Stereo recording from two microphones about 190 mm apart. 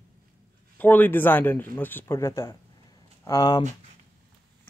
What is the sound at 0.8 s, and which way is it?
Speech, 10° left (ahead or behind).